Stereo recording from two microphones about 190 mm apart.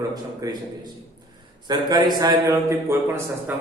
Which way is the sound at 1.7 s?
20° right (ahead or behind).